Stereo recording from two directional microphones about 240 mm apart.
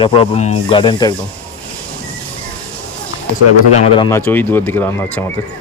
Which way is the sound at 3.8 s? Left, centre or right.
Centre.